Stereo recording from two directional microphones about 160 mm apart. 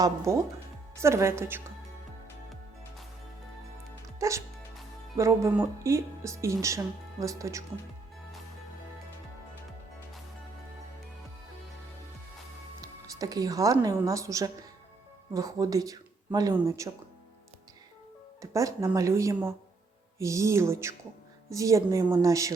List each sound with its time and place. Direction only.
0.3 s a sound: 20° right (ahead or behind)
4.2 s speech: 20° right (ahead or behind)
12.8 s a woman's voice: 25° right (ahead or behind)
18.5 s speech: 20° right (ahead or behind)
20.1 s a sound: 20° right (ahead or behind)
21.5 s speech: 20° right (ahead or behind)